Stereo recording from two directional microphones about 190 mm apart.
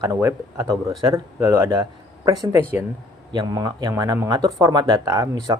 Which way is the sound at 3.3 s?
20° right (ahead or behind).